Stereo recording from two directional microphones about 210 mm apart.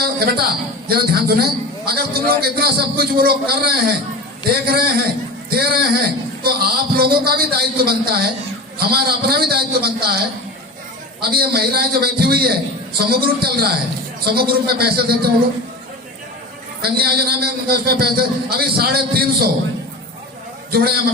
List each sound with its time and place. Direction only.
0.0 s a man's voice: 45° right (ahead or behind)
11.2 s a man's voice: 50° right (ahead or behind)
16.8 s a man's voice: 50° right (ahead or behind)
20.7 s a man's voice: 45° right (ahead or behind)